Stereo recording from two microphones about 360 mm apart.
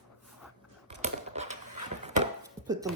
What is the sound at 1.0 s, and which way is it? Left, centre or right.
Typing, centre.